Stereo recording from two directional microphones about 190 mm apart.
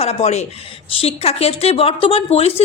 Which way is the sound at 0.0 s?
35° left (ahead or behind).